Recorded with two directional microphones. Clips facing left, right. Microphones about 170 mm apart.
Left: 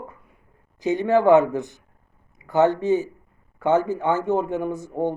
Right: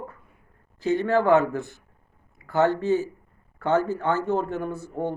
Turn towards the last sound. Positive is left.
turn(degrees=15)  # may be behind; listen again after turning